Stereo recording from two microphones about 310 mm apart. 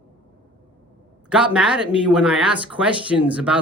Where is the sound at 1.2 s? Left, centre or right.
Centre.